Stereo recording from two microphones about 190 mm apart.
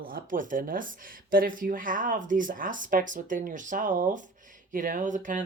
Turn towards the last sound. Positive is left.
turn(degrees=-40)  # may be behind; listen again after turning